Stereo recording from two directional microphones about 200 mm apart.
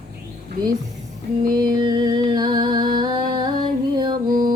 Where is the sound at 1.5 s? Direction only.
20° right (ahead or behind).